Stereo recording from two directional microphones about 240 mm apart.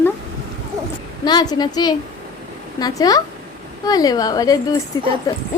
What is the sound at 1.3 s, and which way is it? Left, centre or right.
A woman's voice, centre.